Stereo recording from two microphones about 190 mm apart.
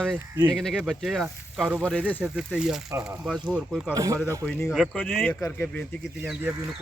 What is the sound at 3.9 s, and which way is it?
Speech, 15° right (ahead or behind).